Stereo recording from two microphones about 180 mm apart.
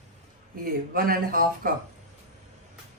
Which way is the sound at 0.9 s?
55° right (ahead or behind).